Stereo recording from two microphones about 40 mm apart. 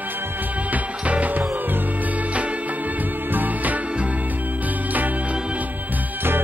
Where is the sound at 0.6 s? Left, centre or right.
Right.